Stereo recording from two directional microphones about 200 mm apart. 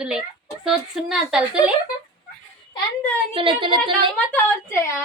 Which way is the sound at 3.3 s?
25° right (ahead or behind).